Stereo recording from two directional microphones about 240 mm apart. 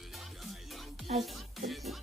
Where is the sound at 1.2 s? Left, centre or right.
Centre.